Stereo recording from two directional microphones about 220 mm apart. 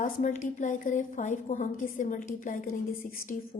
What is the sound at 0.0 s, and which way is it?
A woman's voice, 35° left (ahead or behind).